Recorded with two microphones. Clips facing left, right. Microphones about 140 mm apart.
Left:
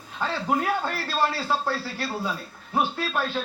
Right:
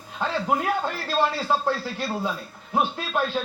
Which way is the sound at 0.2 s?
20° right (ahead or behind).